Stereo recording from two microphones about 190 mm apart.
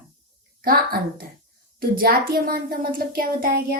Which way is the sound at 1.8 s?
50° right (ahead or behind).